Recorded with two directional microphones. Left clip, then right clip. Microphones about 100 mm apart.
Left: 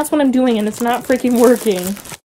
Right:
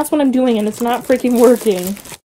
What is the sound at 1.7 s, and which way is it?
Speech, 55° left (ahead or behind).